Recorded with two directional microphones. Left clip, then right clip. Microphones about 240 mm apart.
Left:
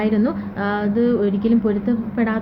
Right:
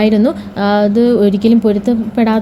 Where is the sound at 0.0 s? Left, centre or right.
Right.